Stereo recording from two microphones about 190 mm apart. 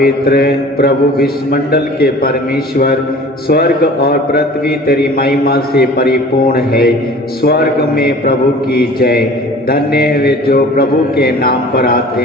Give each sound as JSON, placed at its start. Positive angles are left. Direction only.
{"t": 0.0, "sound": "a man's voice", "side_deg": 55}
{"t": 3.5, "sound": "a man's voice", "side_deg": 55}